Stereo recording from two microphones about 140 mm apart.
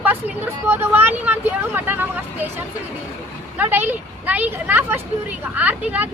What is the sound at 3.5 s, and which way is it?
Speech, 15° right (ahead or behind).